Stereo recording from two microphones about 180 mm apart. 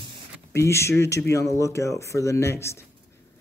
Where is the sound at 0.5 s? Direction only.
15° left (ahead or behind).